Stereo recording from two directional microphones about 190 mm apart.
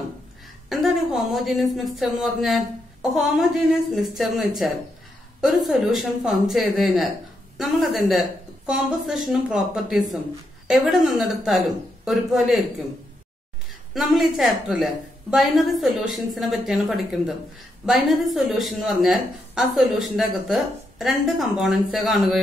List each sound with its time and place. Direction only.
0.7 s speech: centre (ahead or behind)
13.9 s speech: centre (ahead or behind)